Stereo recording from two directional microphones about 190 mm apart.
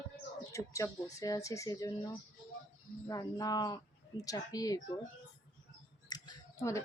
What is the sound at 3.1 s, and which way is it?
Speech, 20° left (ahead or behind).